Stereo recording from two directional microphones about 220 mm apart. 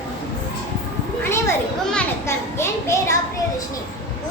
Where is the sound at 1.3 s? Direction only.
10° left (ahead or behind).